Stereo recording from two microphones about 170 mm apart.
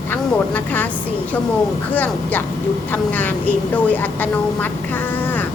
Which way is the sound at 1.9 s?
10° left (ahead or behind).